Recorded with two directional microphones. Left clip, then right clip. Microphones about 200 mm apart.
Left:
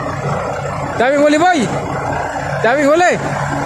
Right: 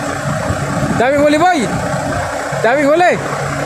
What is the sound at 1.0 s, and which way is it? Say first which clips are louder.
Speech: even; 10° left (ahead or behind).